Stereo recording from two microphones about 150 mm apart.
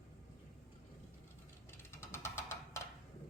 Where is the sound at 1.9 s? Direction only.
15° left (ahead or behind).